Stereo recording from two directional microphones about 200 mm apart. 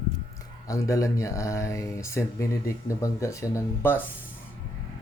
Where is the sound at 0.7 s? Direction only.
15° left (ahead or behind).